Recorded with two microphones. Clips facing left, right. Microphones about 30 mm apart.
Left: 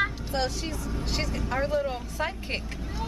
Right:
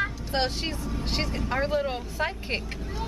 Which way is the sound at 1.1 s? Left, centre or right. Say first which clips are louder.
Right 1 dB; right.